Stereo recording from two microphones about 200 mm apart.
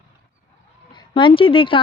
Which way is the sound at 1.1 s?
25° left (ahead or behind).